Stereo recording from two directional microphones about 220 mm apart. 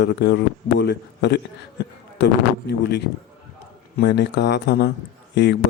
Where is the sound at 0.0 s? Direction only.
50° left (ahead or behind).